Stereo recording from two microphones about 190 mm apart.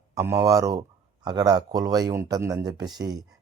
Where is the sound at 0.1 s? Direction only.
15° right (ahead or behind).